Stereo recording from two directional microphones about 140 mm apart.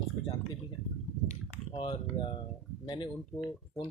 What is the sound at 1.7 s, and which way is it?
Speech, 35° left (ahead or behind).